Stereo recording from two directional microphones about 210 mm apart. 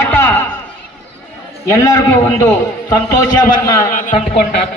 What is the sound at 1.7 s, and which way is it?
Speech, 15° left (ahead or behind).